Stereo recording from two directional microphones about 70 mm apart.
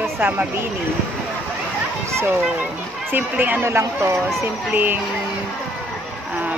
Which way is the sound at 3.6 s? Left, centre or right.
Right.